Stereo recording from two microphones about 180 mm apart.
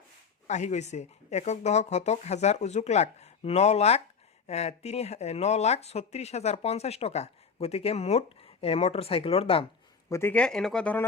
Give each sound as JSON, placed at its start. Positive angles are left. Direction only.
{"t": 0.4, "sound": "speech", "side_deg": 40}
{"t": 10.1, "sound": "speech", "side_deg": 15}